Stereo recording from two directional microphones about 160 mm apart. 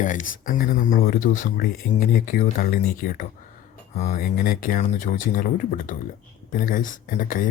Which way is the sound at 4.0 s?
50° left (ahead or behind).